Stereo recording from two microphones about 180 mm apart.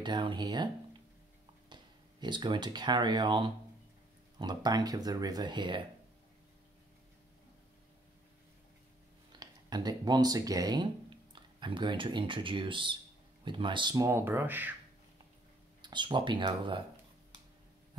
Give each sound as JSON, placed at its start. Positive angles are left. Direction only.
{"t": 0.0, "sound": "speech", "side_deg": -25}
{"t": 1.7, "sound": "speech", "side_deg": -25}
{"t": 9.3, "sound": "speech", "side_deg": -20}
{"t": 15.8, "sound": "speech", "side_deg": -25}